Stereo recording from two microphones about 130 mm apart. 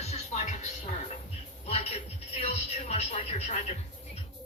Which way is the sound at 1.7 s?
55° left (ahead or behind).